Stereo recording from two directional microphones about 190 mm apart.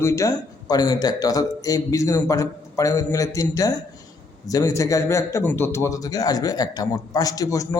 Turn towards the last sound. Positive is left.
turn(degrees=20)  # may be behind; listen again after turning